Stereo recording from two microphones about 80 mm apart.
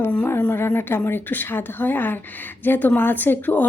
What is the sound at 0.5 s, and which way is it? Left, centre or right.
A woman's voice, left.